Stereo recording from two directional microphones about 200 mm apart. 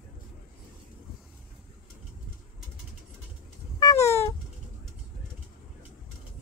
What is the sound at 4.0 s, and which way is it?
Cat, 35° left (ahead or behind).